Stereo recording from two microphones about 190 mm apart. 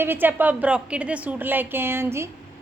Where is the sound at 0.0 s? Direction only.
10° right (ahead or behind).